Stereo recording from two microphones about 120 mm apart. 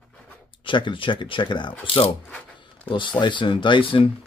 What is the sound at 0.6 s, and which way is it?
Speech, 45° left (ahead or behind).